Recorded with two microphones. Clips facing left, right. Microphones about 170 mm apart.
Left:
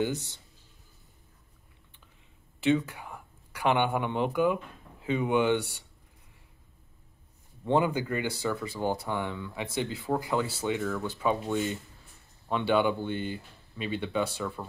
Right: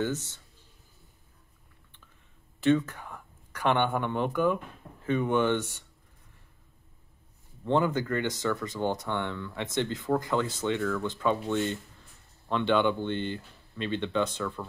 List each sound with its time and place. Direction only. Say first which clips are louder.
0.0 s speech: left 1 dB; 15° left (ahead or behind)
2.6 s speech: right 2 dB; 10° left (ahead or behind)
7.6 s speech: even; 10° left (ahead or behind)